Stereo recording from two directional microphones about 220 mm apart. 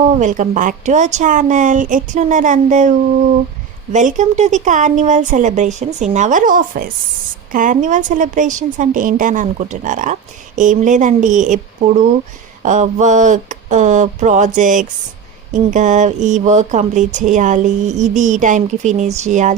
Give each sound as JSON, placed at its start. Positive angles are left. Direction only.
{"t": 0.2, "sound": "a woman's voice", "side_deg": -35}
{"t": 3.9, "sound": "a woman's voice", "side_deg": -35}